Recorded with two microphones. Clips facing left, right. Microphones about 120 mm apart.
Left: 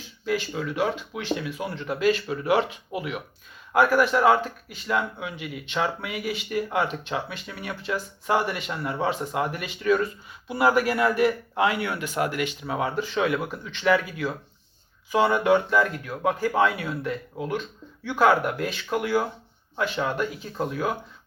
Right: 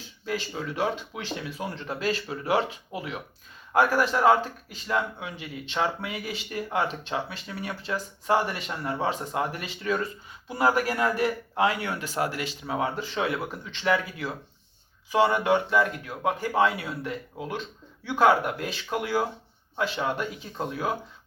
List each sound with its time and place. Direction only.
0.3 s a man's voice: 30° right (ahead or behind)
3.8 s a man's voice: 30° right (ahead or behind)